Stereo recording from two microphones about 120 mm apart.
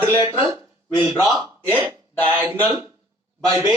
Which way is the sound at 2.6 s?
15° right (ahead or behind).